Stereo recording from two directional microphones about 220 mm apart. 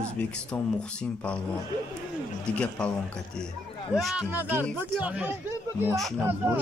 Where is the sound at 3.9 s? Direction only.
Centre (ahead or behind).